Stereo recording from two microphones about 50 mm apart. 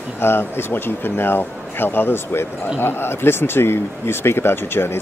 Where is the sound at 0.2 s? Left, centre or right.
Left.